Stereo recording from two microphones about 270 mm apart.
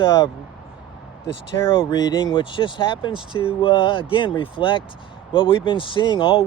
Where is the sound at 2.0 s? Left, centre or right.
Centre.